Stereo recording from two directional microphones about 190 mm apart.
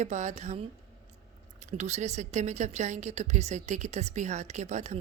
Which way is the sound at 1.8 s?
35° right (ahead or behind).